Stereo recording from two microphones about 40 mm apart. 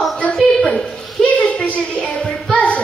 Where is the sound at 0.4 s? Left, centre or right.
Centre.